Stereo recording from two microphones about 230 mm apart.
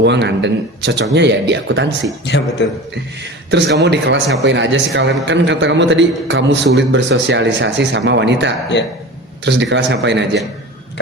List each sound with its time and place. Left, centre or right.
0.0 s a man's voice: right
2.2 s speech: left
3.5 s a man's voice: right